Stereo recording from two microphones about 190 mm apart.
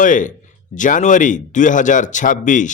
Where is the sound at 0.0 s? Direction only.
45° left (ahead or behind).